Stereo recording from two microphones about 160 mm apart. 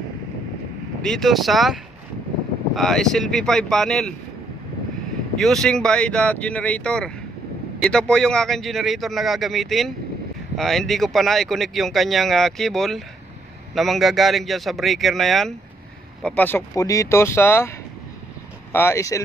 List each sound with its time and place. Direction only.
1.0 s speech: centre (ahead or behind)
5.4 s speech: 5° left (ahead or behind); by 19.2 s 20° left (ahead or behind)